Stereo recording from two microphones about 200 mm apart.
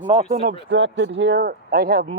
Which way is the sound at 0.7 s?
65° right (ahead or behind).